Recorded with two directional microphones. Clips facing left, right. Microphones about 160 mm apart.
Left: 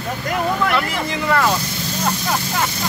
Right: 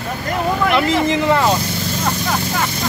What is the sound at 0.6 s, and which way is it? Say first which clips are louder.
Speech: right 5 dB; 20° right (ahead or behind).